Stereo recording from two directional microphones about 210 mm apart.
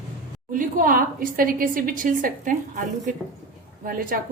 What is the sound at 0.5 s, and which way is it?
A woman's voice, 40° right (ahead or behind).